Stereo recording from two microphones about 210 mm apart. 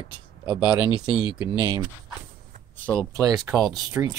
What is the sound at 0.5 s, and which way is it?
Speech, 5° right (ahead or behind).